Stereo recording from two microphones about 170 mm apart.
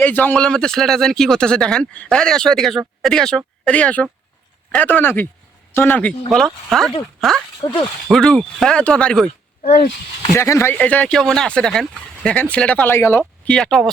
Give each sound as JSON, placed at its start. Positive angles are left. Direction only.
{"t": 0.0, "sound": "speech", "side_deg": 10}
{"t": 7.6, "sound": "speech", "side_deg": 25}
{"t": 8.0, "sound": "speech", "side_deg": 0}
{"t": 10.3, "sound": "speech", "side_deg": 15}